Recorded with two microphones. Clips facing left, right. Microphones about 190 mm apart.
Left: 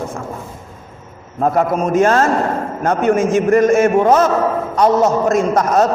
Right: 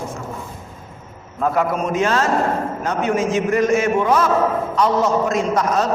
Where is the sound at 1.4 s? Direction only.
40° left (ahead or behind).